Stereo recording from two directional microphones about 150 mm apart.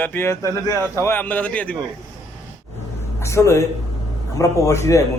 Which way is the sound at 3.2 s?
20° left (ahead or behind).